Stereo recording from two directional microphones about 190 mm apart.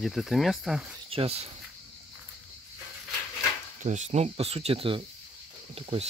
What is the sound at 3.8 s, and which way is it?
Speech, 40° right (ahead or behind).